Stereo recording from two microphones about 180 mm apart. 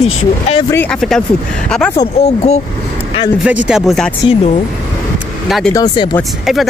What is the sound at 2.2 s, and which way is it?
Speech, 35° left (ahead or behind).